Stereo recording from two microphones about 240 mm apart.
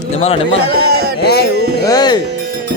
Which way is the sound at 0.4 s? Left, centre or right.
Right.